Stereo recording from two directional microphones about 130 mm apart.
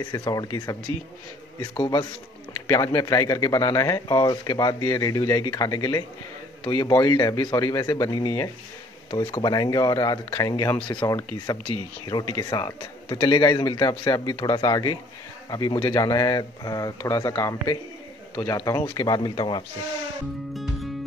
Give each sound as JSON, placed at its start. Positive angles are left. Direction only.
{"t": 0.1, "sound": "speech", "side_deg": 30}
{"t": 9.1, "sound": "speech", "side_deg": 45}
{"t": 10.8, "sound": "speech", "side_deg": 40}
{"t": 12.1, "sound": "speech", "side_deg": 30}